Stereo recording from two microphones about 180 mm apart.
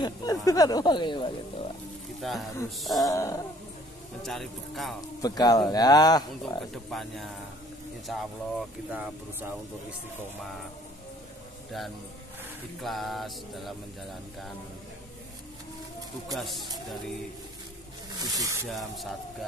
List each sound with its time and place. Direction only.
0.0 s a sound: 20° left (ahead or behind)
0.5 s speech: 20° left (ahead or behind)
2.2 s mantra: centre (ahead or behind)
3.1 s wild animals: 20° left (ahead or behind)
4.2 s mantra: centre (ahead or behind)
5.2 s speech: 20° left (ahead or behind)
6.7 s mantra: centre (ahead or behind)
8.1 s speech: 5° right (ahead or behind)
12.8 s mantra: centre (ahead or behind)
16.3 s mantra: centre (ahead or behind)
18.2 s speech: 20° right (ahead or behind)
18.7 s mantra: centre (ahead or behind)